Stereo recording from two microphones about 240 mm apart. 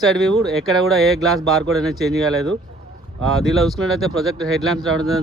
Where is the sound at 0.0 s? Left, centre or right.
Centre.